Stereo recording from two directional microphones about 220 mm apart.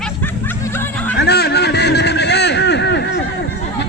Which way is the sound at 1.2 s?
45° left (ahead or behind).